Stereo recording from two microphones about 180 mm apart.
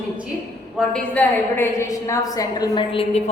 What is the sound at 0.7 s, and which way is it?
A woman's voice, 5° left (ahead or behind).